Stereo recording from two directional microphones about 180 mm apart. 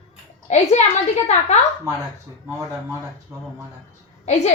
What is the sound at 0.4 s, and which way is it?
Speech, 40° left (ahead or behind).